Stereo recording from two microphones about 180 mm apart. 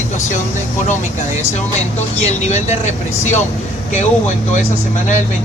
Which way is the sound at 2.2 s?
40° left (ahead or behind).